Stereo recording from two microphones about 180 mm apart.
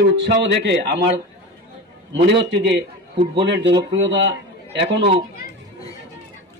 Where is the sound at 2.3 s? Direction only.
75° right (ahead or behind).